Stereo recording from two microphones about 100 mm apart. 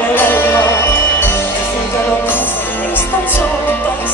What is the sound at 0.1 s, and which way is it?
Music, 20° left (ahead or behind).